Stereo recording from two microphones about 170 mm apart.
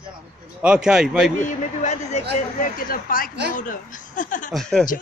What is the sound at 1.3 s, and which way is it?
Speech, 45° left (ahead or behind).